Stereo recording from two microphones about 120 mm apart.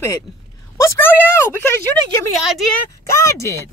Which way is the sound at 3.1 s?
25° left (ahead or behind).